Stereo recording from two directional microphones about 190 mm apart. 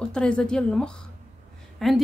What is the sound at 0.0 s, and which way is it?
A woman's voice, 5° left (ahead or behind).